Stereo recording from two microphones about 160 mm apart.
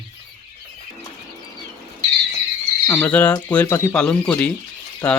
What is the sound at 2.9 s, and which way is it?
Speech, 10° left (ahead or behind).